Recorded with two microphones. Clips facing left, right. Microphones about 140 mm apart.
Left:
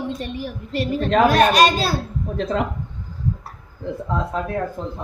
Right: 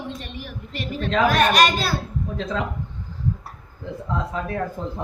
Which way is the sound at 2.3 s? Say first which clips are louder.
Left 5 dB; 55° left (ahead or behind).